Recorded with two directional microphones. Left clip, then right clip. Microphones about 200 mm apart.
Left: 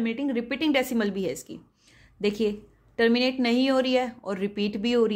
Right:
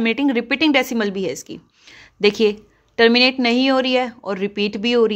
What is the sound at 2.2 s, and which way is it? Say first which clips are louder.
A woman's voice: right 10 dB; 25° right (ahead or behind).